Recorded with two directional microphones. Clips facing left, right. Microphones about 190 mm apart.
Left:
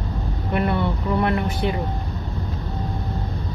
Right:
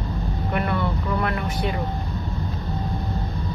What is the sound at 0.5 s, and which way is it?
Vehicle, 30° left (ahead or behind).